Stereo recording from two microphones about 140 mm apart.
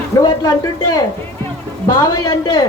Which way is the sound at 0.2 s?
25° left (ahead or behind).